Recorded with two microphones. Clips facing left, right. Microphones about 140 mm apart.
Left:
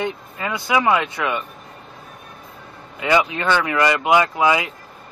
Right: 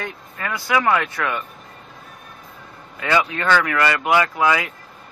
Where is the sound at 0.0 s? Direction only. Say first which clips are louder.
Left 5 dB; 20° left (ahead or behind).